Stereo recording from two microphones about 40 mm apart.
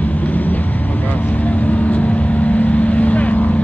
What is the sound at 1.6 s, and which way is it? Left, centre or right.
Vehicle, left.